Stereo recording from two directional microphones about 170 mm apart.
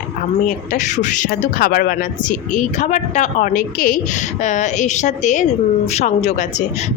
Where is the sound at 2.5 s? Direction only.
45° left (ahead or behind).